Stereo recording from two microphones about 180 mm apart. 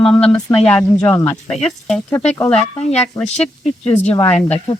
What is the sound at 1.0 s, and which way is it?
Speech, 15° left (ahead or behind).